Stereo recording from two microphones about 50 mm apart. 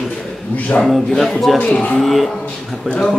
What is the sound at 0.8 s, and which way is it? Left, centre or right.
A man's voice, centre.